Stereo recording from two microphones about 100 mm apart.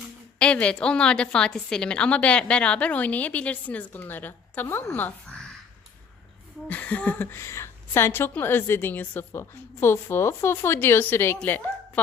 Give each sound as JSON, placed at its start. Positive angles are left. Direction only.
{"t": 0.3, "sound": "a woman's voice", "side_deg": 10}
{"t": 6.7, "sound": "a woman's voice", "side_deg": 15}